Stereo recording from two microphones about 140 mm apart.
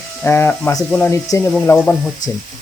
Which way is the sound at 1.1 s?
20° left (ahead or behind).